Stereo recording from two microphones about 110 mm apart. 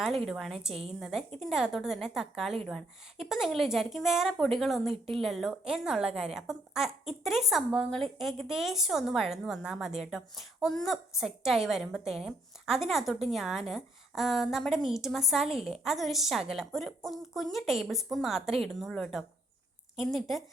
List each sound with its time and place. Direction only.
0.0 s a woman's voice: centre (ahead or behind)
0.7 s a woman's voice: 65° right (ahead or behind)
0.9 s a woman's voice: 5° right (ahead or behind)